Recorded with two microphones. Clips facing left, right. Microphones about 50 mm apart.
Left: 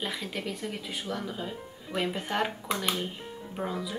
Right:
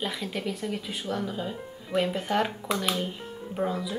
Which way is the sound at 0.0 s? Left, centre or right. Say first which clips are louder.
Right 3 dB; centre.